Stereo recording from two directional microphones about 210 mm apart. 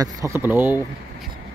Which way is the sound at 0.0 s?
15° right (ahead or behind).